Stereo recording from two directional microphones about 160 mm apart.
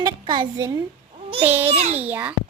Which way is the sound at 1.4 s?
10° right (ahead or behind).